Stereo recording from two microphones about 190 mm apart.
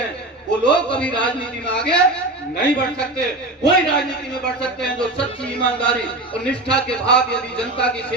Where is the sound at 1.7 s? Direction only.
5° left (ahead or behind).